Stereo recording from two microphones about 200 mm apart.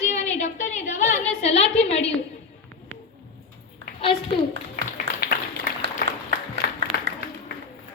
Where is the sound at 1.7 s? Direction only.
30° left (ahead or behind).